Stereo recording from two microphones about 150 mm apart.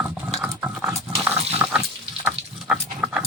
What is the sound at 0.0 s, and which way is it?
Pig, 10° right (ahead or behind).